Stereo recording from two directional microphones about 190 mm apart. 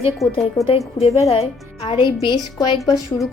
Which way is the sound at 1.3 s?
30° left (ahead or behind).